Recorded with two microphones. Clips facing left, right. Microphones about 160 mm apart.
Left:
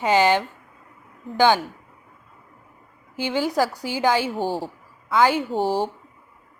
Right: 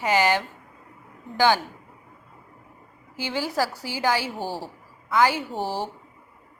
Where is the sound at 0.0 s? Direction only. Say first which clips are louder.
Left 3 dB; 20° left (ahead or behind).